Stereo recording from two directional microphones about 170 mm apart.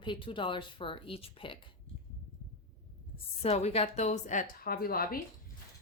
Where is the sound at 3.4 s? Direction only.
40° left (ahead or behind); by 5.2 s 60° left (ahead or behind).